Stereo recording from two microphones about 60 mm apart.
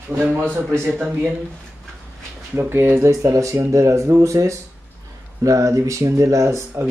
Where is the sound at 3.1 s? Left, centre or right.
Right.